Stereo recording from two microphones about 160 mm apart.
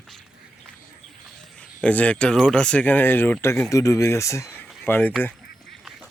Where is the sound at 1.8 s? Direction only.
10° left (ahead or behind).